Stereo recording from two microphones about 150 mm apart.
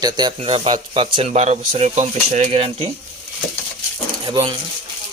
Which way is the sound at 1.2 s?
45° right (ahead or behind).